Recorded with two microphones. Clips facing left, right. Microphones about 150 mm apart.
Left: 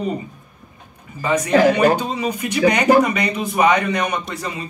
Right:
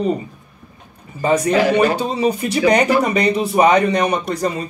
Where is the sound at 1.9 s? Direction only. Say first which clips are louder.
Right 4 dB; 30° right (ahead or behind).